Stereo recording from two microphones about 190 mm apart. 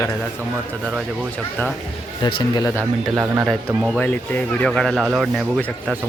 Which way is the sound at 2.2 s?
25° left (ahead or behind).